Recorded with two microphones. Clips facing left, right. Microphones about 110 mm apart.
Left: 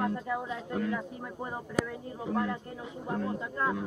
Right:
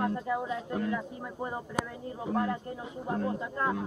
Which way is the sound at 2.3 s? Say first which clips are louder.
Right 1 dB; 25° right (ahead or behind).